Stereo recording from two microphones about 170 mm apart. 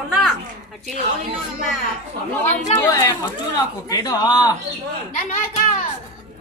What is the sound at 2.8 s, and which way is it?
Speech, 20° left (ahead or behind).